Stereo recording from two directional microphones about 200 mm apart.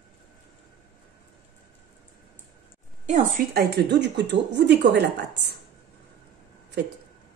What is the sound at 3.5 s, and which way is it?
Speech, 55° right (ahead or behind).